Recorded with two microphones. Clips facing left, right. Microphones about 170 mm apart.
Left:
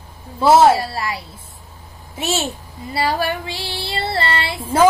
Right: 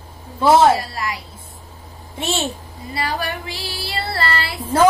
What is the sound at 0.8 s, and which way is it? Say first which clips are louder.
Female singing: left 2 dB; 30° left (ahead or behind).